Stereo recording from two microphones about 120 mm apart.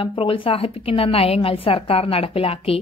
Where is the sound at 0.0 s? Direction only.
50° left (ahead or behind).